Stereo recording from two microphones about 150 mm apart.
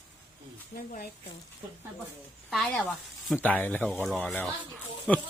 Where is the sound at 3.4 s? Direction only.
10° left (ahead or behind).